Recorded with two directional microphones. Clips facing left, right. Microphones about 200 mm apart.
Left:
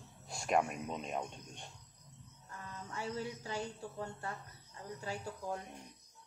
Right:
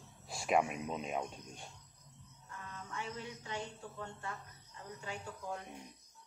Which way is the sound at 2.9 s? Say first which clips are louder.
Left 5 dB; 35° left (ahead or behind).